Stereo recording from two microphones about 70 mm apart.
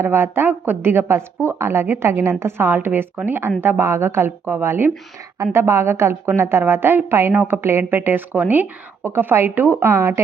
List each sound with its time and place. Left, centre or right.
0.0 s a woman's voice: right